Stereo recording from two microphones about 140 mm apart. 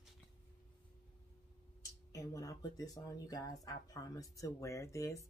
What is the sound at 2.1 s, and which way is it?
Speech, 25° left (ahead or behind).